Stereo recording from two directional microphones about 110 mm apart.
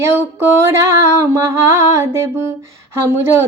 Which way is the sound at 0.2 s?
25° right (ahead or behind).